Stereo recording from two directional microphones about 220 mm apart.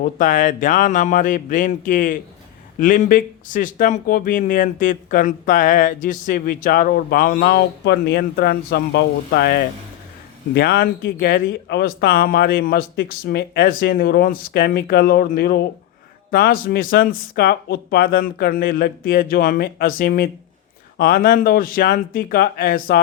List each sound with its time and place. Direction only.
0.0 s speech: 35° left (ahead or behind)